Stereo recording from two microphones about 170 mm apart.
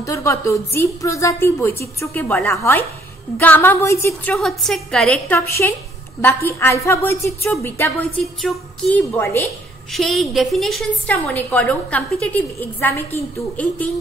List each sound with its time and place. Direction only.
0.0 s a woman's voice: 15° left (ahead or behind)
8.4 s a woman's voice: 5° left (ahead or behind)
9.9 s a woman's voice: centre (ahead or behind)